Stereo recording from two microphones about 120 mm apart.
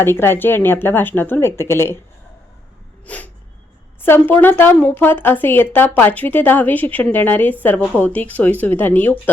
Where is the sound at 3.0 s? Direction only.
15° left (ahead or behind).